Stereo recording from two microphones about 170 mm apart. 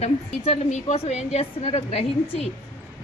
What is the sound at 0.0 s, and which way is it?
A woman's voice, 40° left (ahead or behind).